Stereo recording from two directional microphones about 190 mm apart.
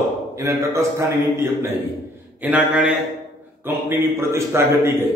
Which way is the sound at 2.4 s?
5° right (ahead or behind).